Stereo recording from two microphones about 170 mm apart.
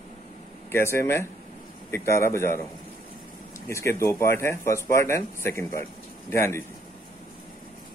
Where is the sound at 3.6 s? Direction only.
15° left (ahead or behind).